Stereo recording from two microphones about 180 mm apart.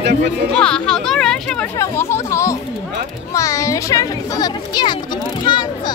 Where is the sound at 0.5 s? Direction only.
5° left (ahead or behind).